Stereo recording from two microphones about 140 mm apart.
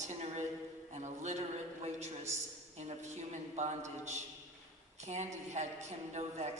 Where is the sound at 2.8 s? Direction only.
55° right (ahead or behind).